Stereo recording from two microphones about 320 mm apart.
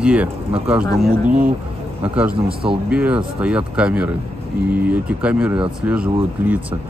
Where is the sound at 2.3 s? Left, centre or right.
Centre.